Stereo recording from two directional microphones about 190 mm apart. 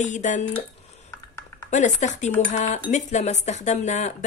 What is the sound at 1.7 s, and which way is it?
Speech, 40° left (ahead or behind).